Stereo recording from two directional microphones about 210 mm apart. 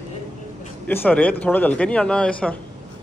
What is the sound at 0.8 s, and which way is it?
A man's voice, 5° left (ahead or behind).